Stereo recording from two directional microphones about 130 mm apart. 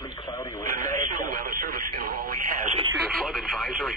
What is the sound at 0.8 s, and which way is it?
Radio, 85° right.